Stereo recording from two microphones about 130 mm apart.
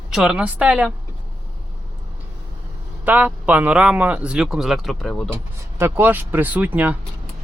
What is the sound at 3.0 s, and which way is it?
A man's voice, 15° right (ahead or behind).